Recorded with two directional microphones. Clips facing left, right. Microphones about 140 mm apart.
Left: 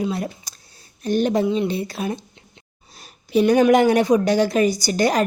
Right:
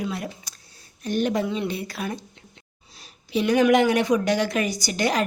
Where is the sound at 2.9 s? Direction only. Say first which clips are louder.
Left 7 dB; 50° left (ahead or behind).